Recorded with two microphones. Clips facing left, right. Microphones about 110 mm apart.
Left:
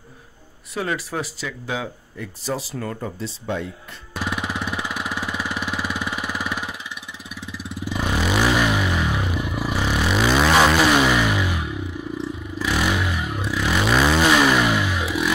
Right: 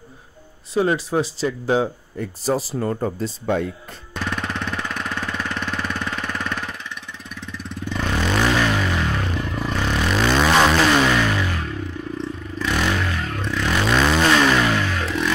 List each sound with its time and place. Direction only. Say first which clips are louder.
0.7 s speech: right 6 dB; 25° right (ahead or behind)
3.2 s speech: right 5 dB; 50° right (ahead or behind)
4.1 s jackhammer: even; 10° left (ahead or behind)
7.2 s vehicle: even; 10° left (ahead or behind)